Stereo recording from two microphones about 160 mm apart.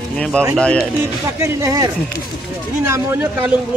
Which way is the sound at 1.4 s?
20° right (ahead or behind).